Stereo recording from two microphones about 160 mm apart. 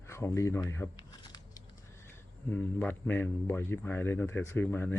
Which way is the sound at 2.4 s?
10° left (ahead or behind).